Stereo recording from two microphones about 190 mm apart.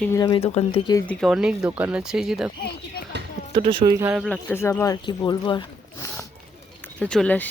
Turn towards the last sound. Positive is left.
turn(degrees=10)  # may be behind; listen again after turning